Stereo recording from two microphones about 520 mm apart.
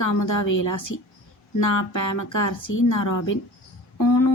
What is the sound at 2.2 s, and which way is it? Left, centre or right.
Speech, left.